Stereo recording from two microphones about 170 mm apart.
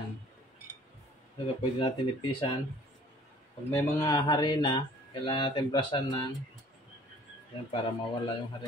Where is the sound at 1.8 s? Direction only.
30° left (ahead or behind).